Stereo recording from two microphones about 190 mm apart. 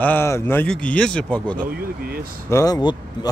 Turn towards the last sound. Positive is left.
turn(degrees=20)  # may be behind; listen again after turning